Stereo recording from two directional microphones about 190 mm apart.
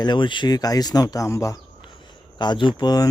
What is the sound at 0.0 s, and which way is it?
Speech, 25° left (ahead or behind).